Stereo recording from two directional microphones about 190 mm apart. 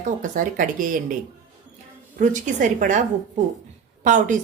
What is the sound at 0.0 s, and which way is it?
A woman's voice, 45° right (ahead or behind).